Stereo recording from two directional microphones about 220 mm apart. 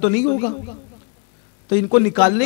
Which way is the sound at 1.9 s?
15° left (ahead or behind).